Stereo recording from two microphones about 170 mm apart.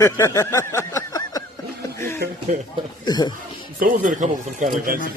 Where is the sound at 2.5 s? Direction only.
50° right (ahead or behind).